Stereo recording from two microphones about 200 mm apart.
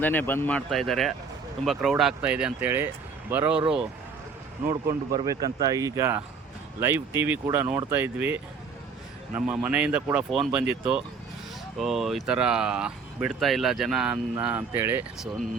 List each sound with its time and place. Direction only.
0.0 s speech: 10° left (ahead or behind); by 3.6 s 10° right (ahead or behind)
4.9 s speech: 15° right (ahead or behind)
11.8 s speech: centre (ahead or behind)